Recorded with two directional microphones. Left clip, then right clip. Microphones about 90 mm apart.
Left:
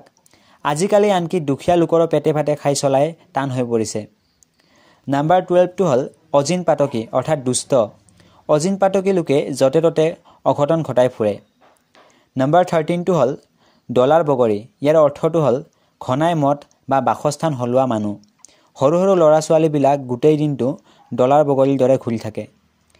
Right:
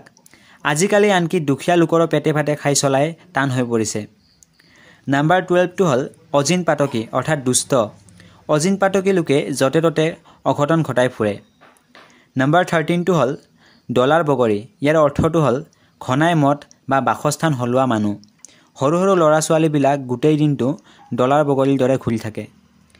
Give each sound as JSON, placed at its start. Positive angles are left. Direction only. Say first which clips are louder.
{"t": 0.0, "sound": "a sound", "louder": "right 3 dB", "side_deg": 25}
{"t": 0.7, "sound": "speech", "louder": "even", "side_deg": 15}
{"t": 5.1, "sound": "speech", "louder": "left 1 dB", "side_deg": 15}
{"t": 18.0, "sound": "speech", "louder": "right 2 dB", "side_deg": -5}
{"t": 18.4, "sound": "a man's voice", "louder": "left 3 dB", "side_deg": 20}